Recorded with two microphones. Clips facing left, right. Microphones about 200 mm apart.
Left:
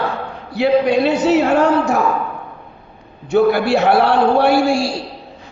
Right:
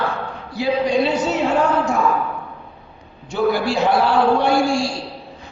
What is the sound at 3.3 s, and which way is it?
A man's voice, 65° left (ahead or behind).